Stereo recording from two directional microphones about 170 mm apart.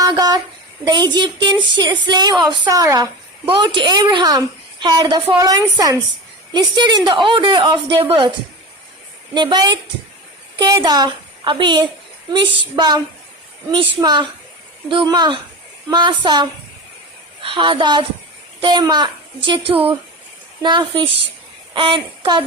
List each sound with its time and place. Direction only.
0.0 s a sound: 20° right (ahead or behind)
0.9 s a woman's voice: 25° right (ahead or behind)
9.3 s a woman's voice: 25° right (ahead or behind)
19.7 s a woman's voice: 10° right (ahead or behind)
20.6 s a woman's voice: 25° right (ahead or behind)